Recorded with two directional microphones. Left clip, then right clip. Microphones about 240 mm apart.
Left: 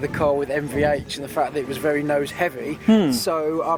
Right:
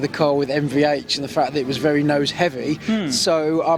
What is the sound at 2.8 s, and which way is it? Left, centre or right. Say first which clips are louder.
Speech: left 5 dB; left.